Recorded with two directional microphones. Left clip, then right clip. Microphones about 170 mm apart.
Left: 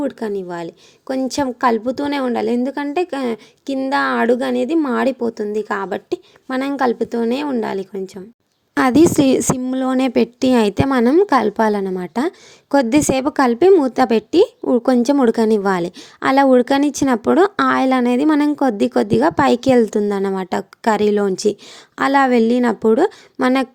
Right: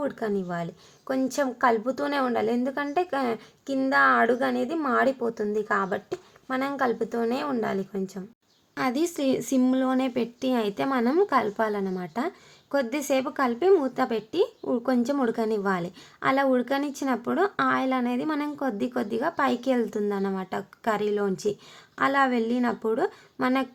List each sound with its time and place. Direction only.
0.0 s a woman's voice: 35° left (ahead or behind)
8.7 s a woman's voice: 90° left
9.6 s a woman's voice: 55° left (ahead or behind)